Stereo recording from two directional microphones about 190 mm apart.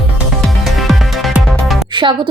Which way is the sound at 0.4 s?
Centre (ahead or behind).